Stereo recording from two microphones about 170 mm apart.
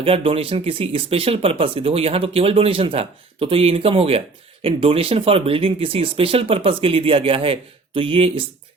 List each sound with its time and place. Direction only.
0.0 s speech: 35° right (ahead or behind)